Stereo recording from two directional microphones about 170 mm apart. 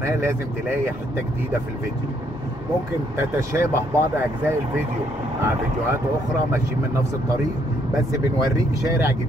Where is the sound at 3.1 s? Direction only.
15° right (ahead or behind).